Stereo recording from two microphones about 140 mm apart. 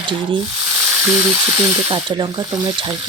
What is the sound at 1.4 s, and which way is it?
Speech, 30° right (ahead or behind).